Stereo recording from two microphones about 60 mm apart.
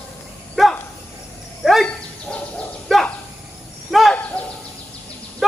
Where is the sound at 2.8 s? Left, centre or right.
Centre.